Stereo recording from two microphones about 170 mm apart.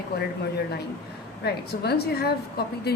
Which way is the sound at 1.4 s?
70° left (ahead or behind).